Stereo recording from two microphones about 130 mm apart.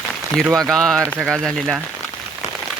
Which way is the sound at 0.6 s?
5° left (ahead or behind).